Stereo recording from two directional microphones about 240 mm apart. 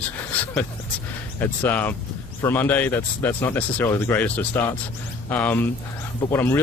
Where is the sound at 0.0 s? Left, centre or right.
Centre.